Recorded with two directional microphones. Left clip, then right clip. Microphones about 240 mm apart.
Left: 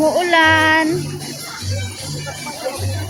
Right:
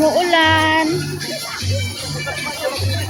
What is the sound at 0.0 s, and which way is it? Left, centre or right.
Music, centre.